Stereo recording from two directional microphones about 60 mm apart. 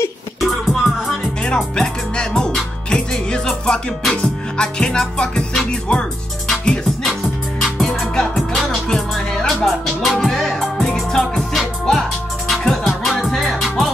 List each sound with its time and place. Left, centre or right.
0.4 s music: centre
1.4 s music: centre
5.6 s speech: centre
6.6 s music: centre
9.7 s music: centre